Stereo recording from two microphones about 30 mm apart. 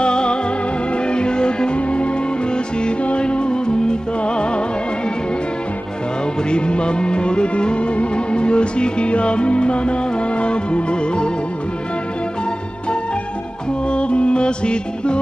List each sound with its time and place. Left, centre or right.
0.0 s music: left
6.5 s music: left
13.8 s music: left